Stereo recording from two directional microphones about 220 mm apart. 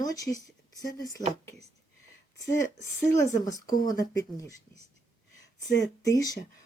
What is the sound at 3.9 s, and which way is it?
Speech, 15° left (ahead or behind).